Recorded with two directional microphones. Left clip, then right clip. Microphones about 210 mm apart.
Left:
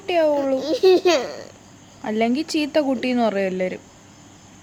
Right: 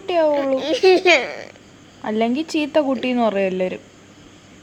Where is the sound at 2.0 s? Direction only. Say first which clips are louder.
Right 1 dB; 5° left (ahead or behind).